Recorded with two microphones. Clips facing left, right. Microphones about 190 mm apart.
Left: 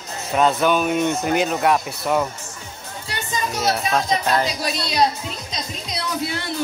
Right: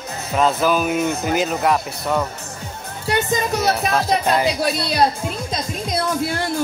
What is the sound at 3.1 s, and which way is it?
A woman's voice, 55° right (ahead or behind).